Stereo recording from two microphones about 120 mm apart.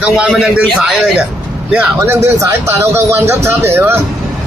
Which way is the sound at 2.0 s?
20° right (ahead or behind).